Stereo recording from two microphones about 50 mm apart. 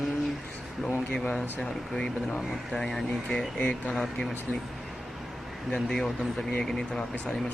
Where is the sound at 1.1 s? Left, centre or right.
Centre.